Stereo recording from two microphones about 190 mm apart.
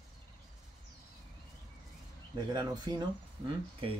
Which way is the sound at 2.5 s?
20° right (ahead or behind).